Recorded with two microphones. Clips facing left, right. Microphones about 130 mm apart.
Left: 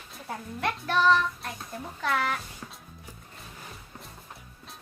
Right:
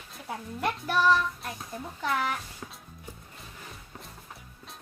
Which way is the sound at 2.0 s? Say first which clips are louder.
Left 1 dB; 15° right (ahead or behind).